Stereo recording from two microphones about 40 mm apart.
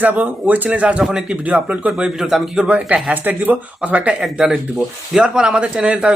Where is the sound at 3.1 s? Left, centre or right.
Right.